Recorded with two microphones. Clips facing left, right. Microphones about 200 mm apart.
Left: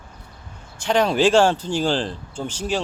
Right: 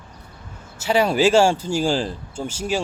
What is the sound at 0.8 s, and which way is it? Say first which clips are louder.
Speech: even; 5° right (ahead or behind).